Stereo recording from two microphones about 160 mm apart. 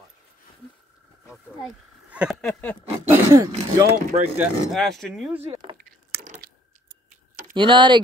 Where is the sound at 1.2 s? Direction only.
5° right (ahead or behind).